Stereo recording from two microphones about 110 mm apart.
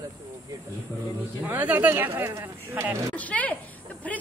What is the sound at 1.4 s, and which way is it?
Speech, 15° right (ahead or behind).